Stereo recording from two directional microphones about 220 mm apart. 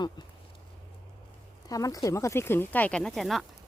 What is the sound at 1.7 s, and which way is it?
Speech, 15° left (ahead or behind).